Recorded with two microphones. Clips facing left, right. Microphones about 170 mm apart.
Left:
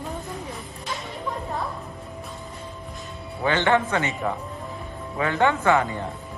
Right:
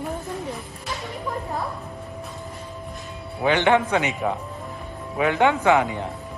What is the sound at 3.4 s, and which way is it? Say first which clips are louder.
A man's voice: right 2 dB; 15° right (ahead or behind).